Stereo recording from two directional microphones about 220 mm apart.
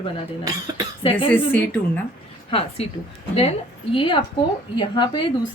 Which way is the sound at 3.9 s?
25° left (ahead or behind).